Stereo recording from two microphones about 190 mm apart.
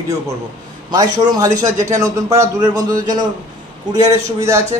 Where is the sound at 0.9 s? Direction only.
20° right (ahead or behind).